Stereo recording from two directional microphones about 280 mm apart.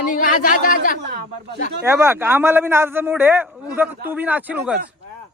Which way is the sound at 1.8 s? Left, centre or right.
Centre.